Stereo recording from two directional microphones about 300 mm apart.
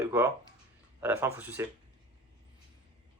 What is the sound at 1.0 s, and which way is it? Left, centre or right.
Speech, centre.